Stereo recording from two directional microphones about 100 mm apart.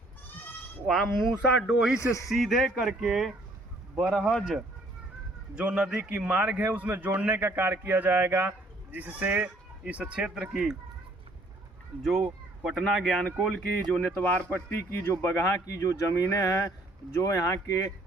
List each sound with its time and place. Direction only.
0.9 s speech: 5° right (ahead or behind)
2.0 s speech: 30° left (ahead or behind)
2.3 s speech: centre (ahead or behind)
5.5 s a man's voice: 10° right (ahead or behind)
12.6 s speech: centre (ahead or behind); by 17.7 s 30° left (ahead or behind)